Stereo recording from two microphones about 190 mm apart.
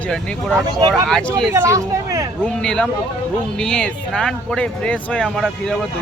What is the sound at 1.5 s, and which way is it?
Speech, 15° right (ahead or behind).